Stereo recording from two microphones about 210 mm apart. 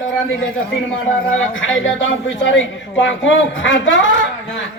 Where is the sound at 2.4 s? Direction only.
65° left (ahead or behind).